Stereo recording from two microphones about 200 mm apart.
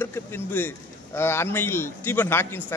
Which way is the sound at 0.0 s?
10° left (ahead or behind).